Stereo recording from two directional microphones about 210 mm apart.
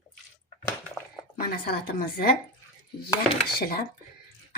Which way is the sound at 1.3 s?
45° left (ahead or behind).